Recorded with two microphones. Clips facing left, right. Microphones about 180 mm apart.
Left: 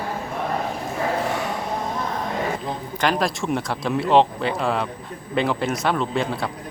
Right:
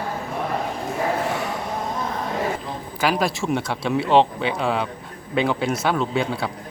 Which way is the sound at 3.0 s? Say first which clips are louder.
Right 1 dB; 5° right (ahead or behind).